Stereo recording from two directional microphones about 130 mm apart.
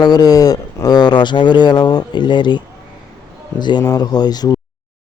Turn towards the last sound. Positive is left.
turn(degrees=30)  # may be behind; listen again after turning